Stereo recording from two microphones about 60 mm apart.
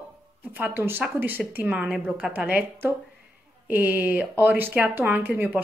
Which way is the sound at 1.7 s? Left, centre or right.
Centre.